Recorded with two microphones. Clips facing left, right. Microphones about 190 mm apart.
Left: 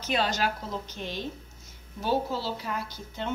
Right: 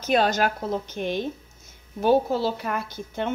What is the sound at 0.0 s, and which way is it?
A woman's voice, 50° right (ahead or behind).